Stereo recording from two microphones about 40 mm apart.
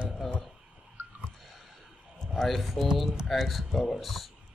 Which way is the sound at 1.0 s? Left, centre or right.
Right.